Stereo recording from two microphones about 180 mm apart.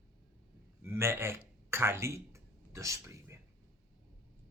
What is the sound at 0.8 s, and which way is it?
A man's voice, 15° right (ahead or behind).